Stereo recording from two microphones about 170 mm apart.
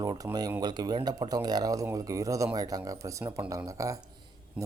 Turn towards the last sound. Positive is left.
turn(degrees=-5)  # may be behind; listen again after turning